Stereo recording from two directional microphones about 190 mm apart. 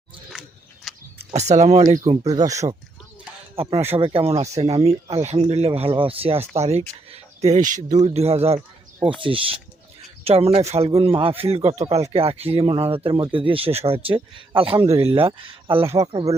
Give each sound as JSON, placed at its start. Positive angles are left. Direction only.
{"t": 0.3, "sound": "biting", "side_deg": -5}
{"t": 0.9, "sound": "a sound", "side_deg": 0}
{"t": 1.2, "sound": "speech", "side_deg": -35}
{"t": 2.2, "sound": "a man's voice", "side_deg": -20}
{"t": 3.5, "sound": "a man's voice", "side_deg": -30}